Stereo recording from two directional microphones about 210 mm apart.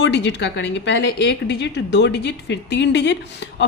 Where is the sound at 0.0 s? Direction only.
55° left (ahead or behind).